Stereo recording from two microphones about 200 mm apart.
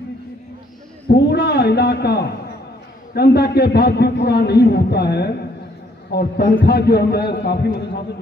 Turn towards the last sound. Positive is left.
turn(degrees=55)  # may be behind; listen again after turning